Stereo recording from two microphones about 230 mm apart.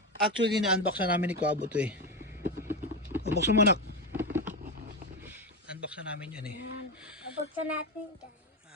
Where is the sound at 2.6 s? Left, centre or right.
Centre.